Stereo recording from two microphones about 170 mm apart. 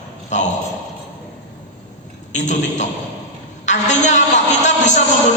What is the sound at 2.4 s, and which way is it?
A man's voice, 45° left (ahead or behind).